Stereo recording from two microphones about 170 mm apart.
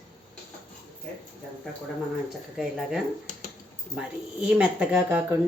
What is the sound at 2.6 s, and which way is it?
A woman's voice, centre (ahead or behind).